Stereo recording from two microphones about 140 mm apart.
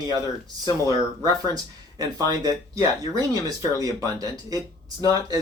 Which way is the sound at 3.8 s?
25° right (ahead or behind).